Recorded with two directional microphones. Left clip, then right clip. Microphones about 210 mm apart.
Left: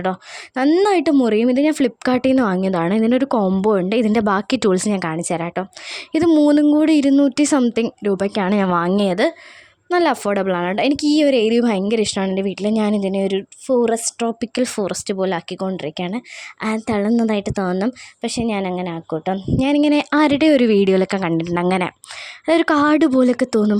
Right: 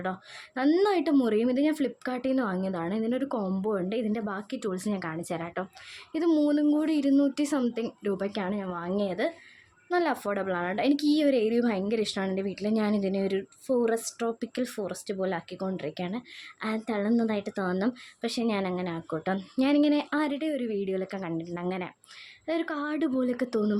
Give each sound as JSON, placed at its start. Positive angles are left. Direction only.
{"t": 0.0, "sound": "speech", "side_deg": 40}